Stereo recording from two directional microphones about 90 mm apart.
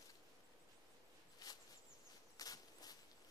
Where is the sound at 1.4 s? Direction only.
45° left (ahead or behind).